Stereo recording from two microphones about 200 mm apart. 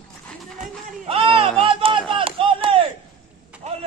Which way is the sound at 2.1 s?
25° right (ahead or behind).